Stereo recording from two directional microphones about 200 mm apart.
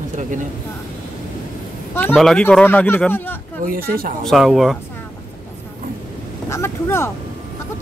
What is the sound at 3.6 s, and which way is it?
Speech, 45° right (ahead or behind).